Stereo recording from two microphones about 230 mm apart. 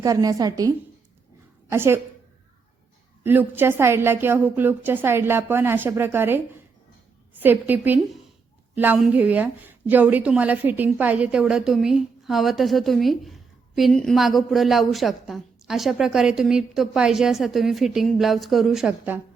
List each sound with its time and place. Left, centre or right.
0.0 s a woman's voice: centre
1.7 s a woman's voice: centre
3.2 s a woman's voice: centre